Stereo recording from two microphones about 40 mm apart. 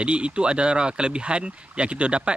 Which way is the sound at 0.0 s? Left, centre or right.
Right.